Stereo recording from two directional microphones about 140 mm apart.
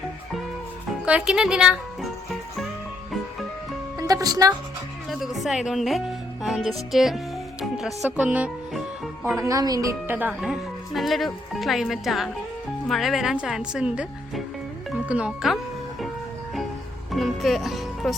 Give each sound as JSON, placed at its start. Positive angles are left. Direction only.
{"t": 1.0, "sound": "speech", "side_deg": -5}
{"t": 3.9, "sound": "music", "side_deg": -25}
{"t": 5.0, "sound": "speech", "side_deg": 0}
{"t": 7.6, "sound": "music", "side_deg": 0}
{"t": 8.1, "sound": "speech", "side_deg": -10}
{"t": 9.2, "sound": "speech", "side_deg": -20}
{"t": 10.1, "sound": "speech", "side_deg": -10}
{"t": 17.1, "sound": "music", "side_deg": 0}